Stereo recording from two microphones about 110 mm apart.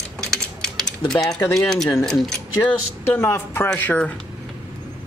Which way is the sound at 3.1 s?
20° left (ahead or behind).